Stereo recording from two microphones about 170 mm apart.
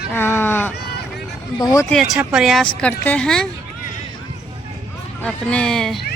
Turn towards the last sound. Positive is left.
turn(degrees=5)  # may be behind; listen again after turning